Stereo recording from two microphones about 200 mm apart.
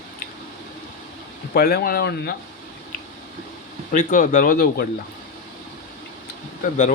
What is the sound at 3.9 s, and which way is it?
Speech, 40° left (ahead or behind).